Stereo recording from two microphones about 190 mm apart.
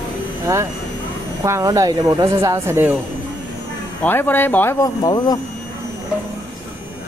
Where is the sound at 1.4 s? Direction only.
15° right (ahead or behind).